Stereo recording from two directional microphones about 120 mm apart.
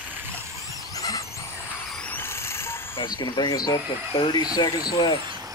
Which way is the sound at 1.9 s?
10° left (ahead or behind).